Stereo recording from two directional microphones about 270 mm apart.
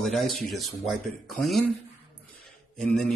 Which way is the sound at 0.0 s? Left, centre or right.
Centre.